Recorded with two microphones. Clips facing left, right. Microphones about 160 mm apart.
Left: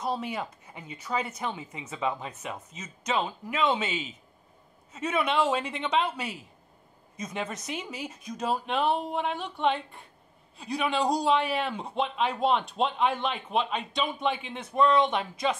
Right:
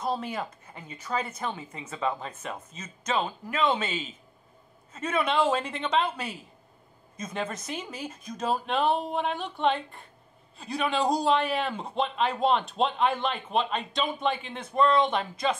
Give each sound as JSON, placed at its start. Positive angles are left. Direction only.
{"t": 0.0, "sound": "speech", "side_deg": 15}
{"t": 7.3, "sound": "speech", "side_deg": 15}